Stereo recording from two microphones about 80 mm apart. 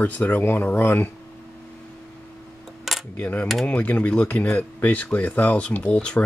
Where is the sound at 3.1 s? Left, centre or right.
Left.